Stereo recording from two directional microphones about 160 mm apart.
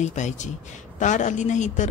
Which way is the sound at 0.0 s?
45° left (ahead or behind).